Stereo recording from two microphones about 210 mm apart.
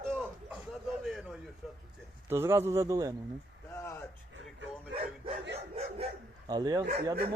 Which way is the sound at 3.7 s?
15° left (ahead or behind).